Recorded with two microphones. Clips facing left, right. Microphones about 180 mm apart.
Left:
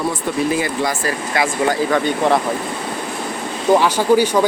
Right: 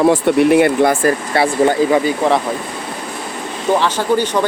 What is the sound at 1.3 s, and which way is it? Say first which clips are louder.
Speech: right 2 dB; 35° right (ahead or behind).